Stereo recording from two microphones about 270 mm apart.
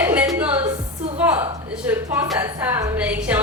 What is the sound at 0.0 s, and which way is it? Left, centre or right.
Music, centre.